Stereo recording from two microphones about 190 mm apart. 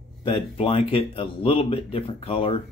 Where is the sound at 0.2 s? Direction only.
30° left (ahead or behind).